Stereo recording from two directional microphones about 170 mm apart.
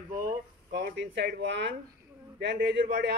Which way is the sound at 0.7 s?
85° right.